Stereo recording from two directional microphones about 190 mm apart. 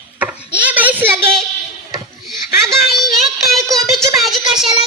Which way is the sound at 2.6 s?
Centre (ahead or behind).